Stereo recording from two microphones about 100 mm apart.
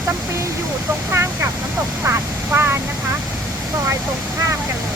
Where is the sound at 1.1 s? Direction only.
25° right (ahead or behind).